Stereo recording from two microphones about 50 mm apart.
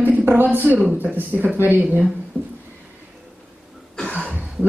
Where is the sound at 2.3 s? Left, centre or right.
Left.